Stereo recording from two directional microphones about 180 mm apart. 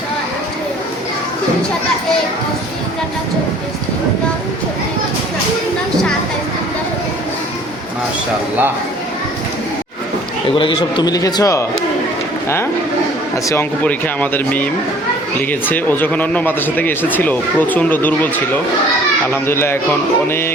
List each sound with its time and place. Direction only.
10.5 s a man's voice: 30° left (ahead or behind)
13.3 s speech: 15° left (ahead or behind)
19.3 s speech: 15° left (ahead or behind)